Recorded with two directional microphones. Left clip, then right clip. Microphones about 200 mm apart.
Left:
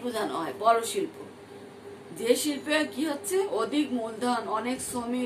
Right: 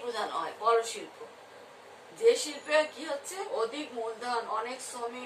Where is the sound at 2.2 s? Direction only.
50° left (ahead or behind).